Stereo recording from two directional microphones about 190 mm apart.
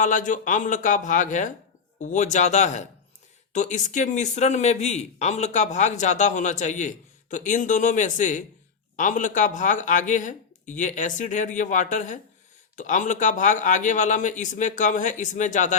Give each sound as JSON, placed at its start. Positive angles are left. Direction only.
{"t": 0.0, "sound": "speech", "side_deg": 40}